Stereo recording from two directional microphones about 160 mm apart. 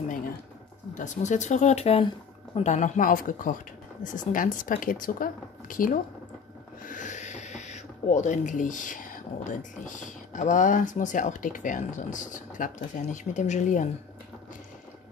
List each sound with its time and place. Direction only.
0.9 s speech: 50° left (ahead or behind)